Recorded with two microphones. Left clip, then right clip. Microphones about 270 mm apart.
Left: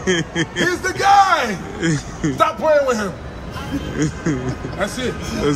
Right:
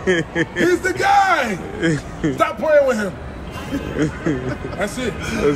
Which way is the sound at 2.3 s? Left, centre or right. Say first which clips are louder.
Even; centre.